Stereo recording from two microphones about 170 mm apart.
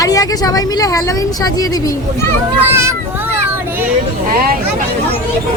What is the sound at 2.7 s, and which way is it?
Speech, 15° right (ahead or behind).